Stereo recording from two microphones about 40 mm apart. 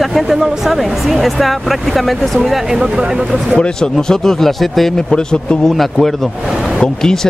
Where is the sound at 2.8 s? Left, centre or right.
Right.